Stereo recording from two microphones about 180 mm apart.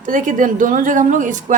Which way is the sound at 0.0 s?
45° right (ahead or behind).